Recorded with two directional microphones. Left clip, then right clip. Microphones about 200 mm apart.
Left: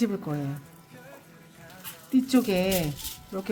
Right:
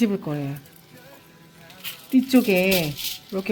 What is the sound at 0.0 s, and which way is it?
Speech, 20° right (ahead or behind).